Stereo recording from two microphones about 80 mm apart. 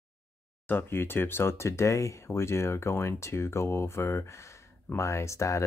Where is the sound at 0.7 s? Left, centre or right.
Left.